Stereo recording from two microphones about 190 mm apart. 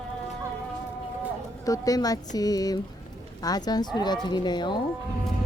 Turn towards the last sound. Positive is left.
turn(degrees=25)  # may be behind; listen again after turning